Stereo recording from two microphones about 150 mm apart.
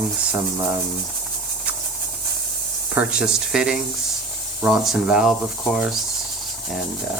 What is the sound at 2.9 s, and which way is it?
Speech, 5° right (ahead or behind).